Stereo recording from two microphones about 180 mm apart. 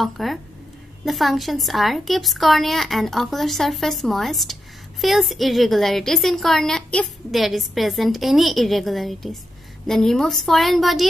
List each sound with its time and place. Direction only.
0.0 s a woman's voice: centre (ahead or behind)